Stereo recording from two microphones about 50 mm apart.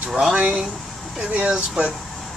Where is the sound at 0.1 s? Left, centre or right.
Centre.